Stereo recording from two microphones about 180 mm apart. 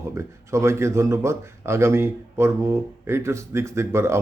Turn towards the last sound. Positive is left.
turn(degrees=-15)  # may be behind; listen again after turning